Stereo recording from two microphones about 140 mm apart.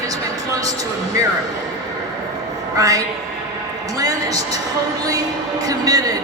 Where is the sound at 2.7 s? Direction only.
25° right (ahead or behind).